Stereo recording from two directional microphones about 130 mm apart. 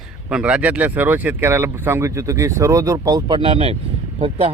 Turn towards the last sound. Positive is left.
turn(degrees=-45)  # may be behind; listen again after turning